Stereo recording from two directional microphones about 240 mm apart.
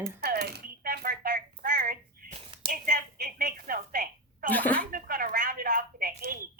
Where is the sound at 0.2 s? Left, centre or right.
Right.